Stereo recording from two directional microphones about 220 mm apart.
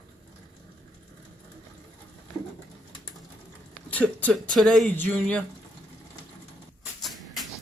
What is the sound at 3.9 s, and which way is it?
Speech, 5° left (ahead or behind).